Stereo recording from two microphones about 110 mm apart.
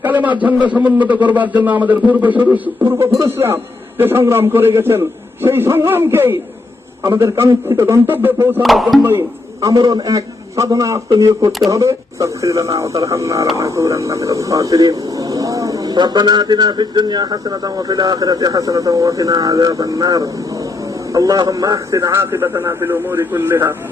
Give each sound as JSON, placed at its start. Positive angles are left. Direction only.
{"t": 0.0, "sound": "a sound", "side_deg": -15}
{"t": 0.4, "sound": "a man's voice", "side_deg": -15}
{"t": 8.6, "sound": "speech", "side_deg": 0}
{"t": 9.6, "sound": "a man's voice", "side_deg": -35}